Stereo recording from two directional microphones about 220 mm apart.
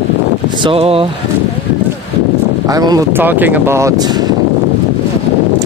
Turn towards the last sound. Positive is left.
turn(degrees=-20)  # may be behind; listen again after turning